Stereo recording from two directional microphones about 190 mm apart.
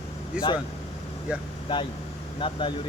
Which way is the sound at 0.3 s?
5° right (ahead or behind).